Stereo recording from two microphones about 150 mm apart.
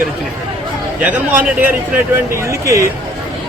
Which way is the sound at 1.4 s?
10° right (ahead or behind).